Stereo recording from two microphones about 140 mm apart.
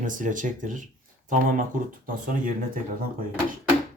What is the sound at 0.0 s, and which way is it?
Speech, 70° right (ahead or behind).